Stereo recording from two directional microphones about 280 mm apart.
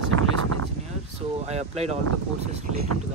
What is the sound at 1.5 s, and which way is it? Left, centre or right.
Speech, right.